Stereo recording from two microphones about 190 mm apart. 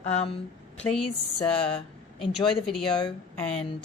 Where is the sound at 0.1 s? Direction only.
35° left (ahead or behind).